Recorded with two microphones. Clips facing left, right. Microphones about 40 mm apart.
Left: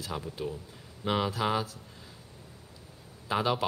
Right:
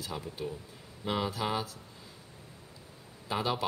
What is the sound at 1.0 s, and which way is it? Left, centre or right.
Speech, left.